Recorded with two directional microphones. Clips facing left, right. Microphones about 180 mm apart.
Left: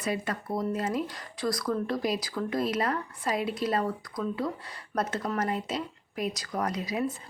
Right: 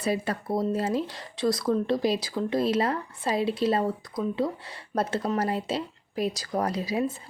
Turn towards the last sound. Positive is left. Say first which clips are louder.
# right 3 dB
turn(degrees=-30)  # may be behind; listen again after turning